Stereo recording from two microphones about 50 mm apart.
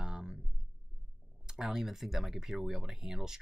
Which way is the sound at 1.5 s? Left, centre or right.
Centre.